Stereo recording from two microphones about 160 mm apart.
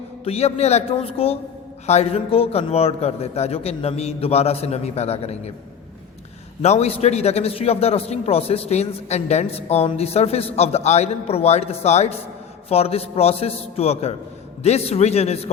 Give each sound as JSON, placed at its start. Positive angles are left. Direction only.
{"t": 0.3, "sound": "a man's voice", "side_deg": 40}
{"t": 6.6, "sound": "a man's voice", "side_deg": 40}